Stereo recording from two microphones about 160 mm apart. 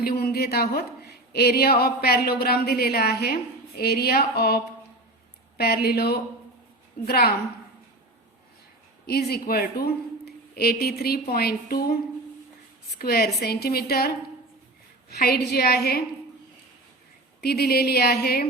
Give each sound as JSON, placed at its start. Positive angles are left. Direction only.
{"t": 0.0, "sound": "a woman's voice", "side_deg": 75}
{"t": 9.0, "sound": "speech", "side_deg": 75}
{"t": 13.0, "sound": "a woman's voice", "side_deg": 75}
{"t": 15.1, "sound": "a woman's voice", "side_deg": 80}
{"t": 17.4, "sound": "speech", "side_deg": 80}